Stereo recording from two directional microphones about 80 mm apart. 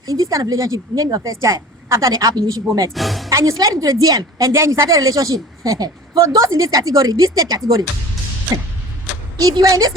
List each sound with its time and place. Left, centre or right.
0.0 s a woman's voice: right
1.4 s a woman's voice: right
2.9 s speech: centre
3.2 s a woman's voice: right
9.4 s a woman's voice: right